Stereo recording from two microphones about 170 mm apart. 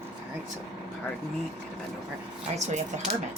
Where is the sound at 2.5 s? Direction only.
40° right (ahead or behind).